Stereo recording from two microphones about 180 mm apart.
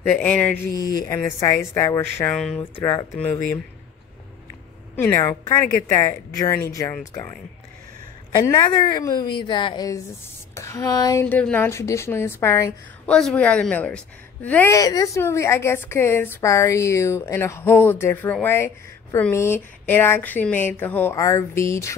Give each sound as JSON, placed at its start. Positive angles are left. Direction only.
{"t": 0.0, "sound": "a woman's voice", "side_deg": 5}
{"t": 1.0, "sound": "a woman's voice", "side_deg": 20}
{"t": 2.8, "sound": "a woman's voice", "side_deg": 15}
{"t": 4.9, "sound": "a woman's voice", "side_deg": 15}
{"t": 8.5, "sound": "a woman's voice", "side_deg": 25}